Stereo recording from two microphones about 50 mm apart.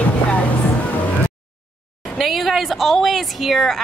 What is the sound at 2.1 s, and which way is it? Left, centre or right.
A woman's voice, centre.